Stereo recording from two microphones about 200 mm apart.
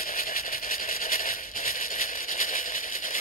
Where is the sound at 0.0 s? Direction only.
45° left (ahead or behind).